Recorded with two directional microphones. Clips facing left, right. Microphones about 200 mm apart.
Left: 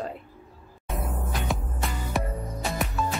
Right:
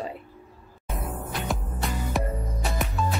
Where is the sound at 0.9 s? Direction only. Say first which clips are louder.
Left 1 dB; centre (ahead or behind).